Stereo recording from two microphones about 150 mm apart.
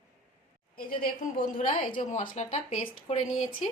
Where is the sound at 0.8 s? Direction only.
75° left (ahead or behind).